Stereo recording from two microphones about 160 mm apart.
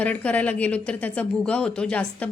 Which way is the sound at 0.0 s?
10° left (ahead or behind).